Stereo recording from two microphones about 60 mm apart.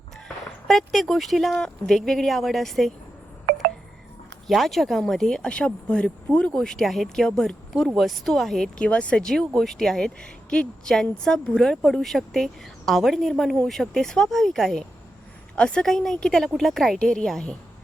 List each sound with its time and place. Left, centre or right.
0.7 s speech: centre
4.4 s speech: centre
5.5 s speech: centre
8.8 s speech: centre
15.5 s speech: centre
15.9 s speech: centre